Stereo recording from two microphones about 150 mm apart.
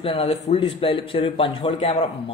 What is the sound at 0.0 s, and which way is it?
Speech, 45° left (ahead or behind).